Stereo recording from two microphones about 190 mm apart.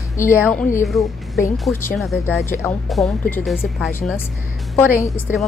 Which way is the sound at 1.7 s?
10° left (ahead or behind).